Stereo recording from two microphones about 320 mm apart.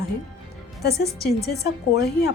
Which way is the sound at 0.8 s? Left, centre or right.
Left.